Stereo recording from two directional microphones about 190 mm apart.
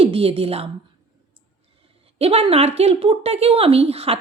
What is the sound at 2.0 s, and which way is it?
Speech, 30° right (ahead or behind).